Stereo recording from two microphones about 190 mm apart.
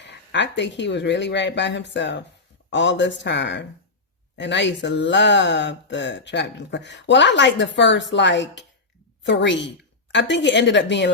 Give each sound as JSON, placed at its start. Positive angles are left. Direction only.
{"t": 0.0, "sound": "speech", "side_deg": 65}